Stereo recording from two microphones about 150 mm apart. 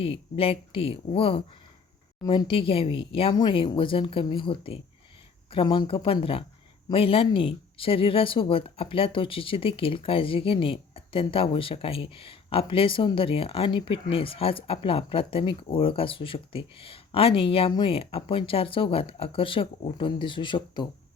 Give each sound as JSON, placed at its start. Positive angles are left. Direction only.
{"t": 0.0, "sound": "speech", "side_deg": 40}